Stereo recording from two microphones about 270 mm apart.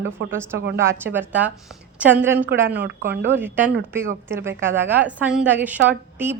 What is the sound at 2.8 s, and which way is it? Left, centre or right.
Speech, right.